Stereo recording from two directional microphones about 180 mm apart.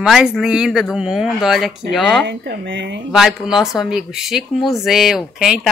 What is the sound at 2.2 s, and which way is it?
Speech, 70° right (ahead or behind).